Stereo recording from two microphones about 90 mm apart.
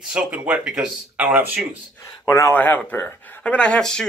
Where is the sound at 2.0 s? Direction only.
35° left (ahead or behind).